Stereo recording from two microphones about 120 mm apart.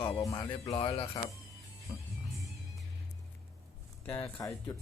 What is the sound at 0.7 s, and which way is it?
Speech, 50° left (ahead or behind).